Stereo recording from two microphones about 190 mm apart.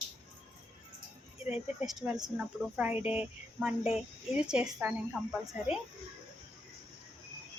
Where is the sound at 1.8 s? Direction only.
Centre (ahead or behind).